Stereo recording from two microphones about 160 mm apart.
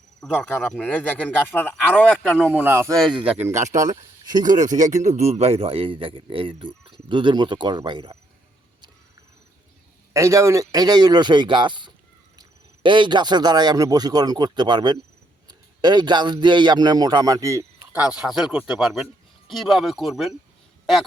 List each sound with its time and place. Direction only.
0.2 s speech: centre (ahead or behind)
2.4 s speech: 10° right (ahead or behind)
3.8 s speech: 25° right (ahead or behind)
5.0 s speech: 45° right (ahead or behind); by 8.2 s 30° right (ahead or behind)
10.1 s a man's voice: 20° right (ahead or behind); by 20.3 s centre (ahead or behind)